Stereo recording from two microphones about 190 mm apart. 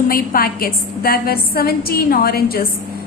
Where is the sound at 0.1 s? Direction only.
50° left (ahead or behind).